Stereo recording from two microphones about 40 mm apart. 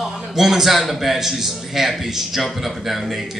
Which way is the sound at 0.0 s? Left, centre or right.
Centre.